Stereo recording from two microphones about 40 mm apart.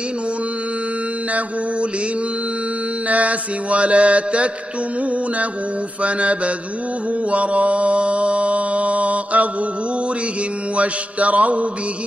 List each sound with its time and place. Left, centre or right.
3.1 s mantra: right
6.0 s mantra: right
10.8 s mantra: right